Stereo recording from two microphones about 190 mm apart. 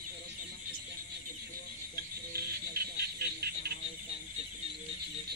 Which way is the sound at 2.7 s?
55° right (ahead or behind).